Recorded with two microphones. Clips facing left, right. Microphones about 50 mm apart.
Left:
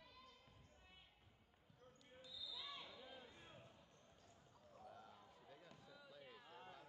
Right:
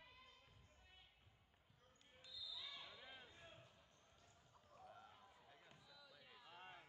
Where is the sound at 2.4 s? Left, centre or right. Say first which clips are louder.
Left 2 dB; left.